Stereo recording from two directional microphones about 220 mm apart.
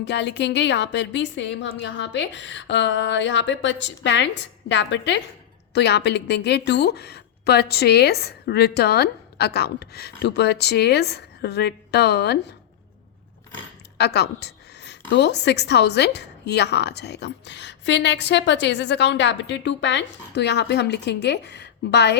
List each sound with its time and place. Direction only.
0.0 s a woman's voice: 50° left (ahead or behind)
14.0 s a sound: 50° left (ahead or behind)
15.1 s a woman's voice: 50° left (ahead or behind)